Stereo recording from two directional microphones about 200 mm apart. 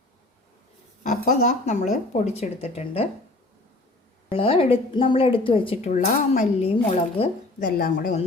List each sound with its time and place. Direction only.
1.0 s speech: 40° left (ahead or behind)
4.3 s speech: 25° left (ahead or behind)
7.6 s a woman's voice: 45° left (ahead or behind)